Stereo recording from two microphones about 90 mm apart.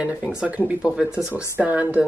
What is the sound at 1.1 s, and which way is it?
Speech, 35° left (ahead or behind).